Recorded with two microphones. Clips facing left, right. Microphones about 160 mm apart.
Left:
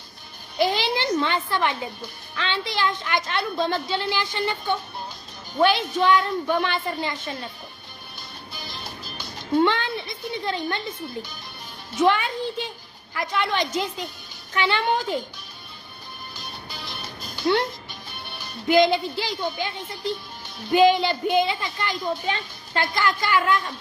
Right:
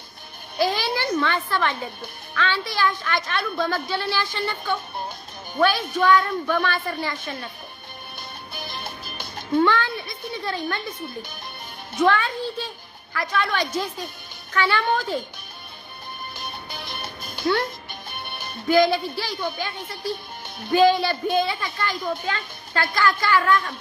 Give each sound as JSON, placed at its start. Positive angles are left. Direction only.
{"t": 0.6, "sound": "a child's voice", "side_deg": 20}
{"t": 8.5, "sound": "music", "side_deg": -55}
{"t": 9.6, "sound": "music", "side_deg": 20}
{"t": 11.9, "sound": "a child's voice", "side_deg": 20}
{"t": 16.4, "sound": "music", "side_deg": -55}
{"t": 17.4, "sound": "music", "side_deg": 25}
{"t": 18.1, "sound": "music", "side_deg": -55}
{"t": 18.7, "sound": "a woman's voice", "side_deg": 20}